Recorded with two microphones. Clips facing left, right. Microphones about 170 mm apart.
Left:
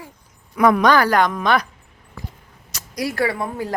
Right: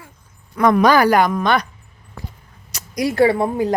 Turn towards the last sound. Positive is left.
turn(degrees=-25)  # may be behind; listen again after turning